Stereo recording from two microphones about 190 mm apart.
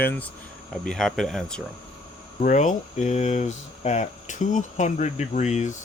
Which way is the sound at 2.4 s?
40° left (ahead or behind).